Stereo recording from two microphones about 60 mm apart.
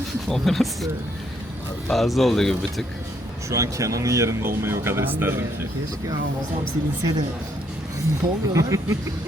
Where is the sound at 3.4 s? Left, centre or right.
Right.